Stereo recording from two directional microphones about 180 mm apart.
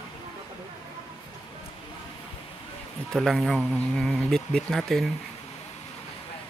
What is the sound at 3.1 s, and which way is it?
Speech, centre (ahead or behind).